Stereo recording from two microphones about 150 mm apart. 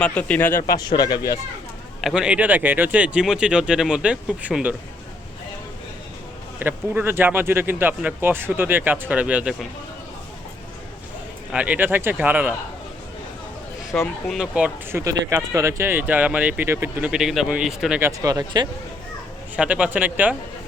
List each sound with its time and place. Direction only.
0.0 s speech: 10° left (ahead or behind)
0.8 s speech: 25° left (ahead or behind)
2.0 s speech: 5° right (ahead or behind)
6.6 s speech: 15° right (ahead or behind)
11.5 s speech: 10° right (ahead or behind)
13.9 s speech: 5° left (ahead or behind)
15.0 s speech: 20° right (ahead or behind)
17.1 s speech: 5° right (ahead or behind)
18.0 s speech: 25° right (ahead or behind)
19.5 s speech: 10° right (ahead or behind)